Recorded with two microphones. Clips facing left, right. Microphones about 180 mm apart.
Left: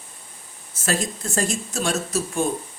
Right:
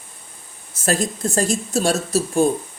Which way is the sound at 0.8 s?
40° right (ahead or behind).